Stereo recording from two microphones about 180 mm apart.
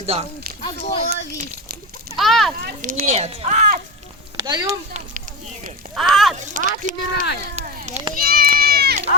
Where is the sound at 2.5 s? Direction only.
55° right (ahead or behind).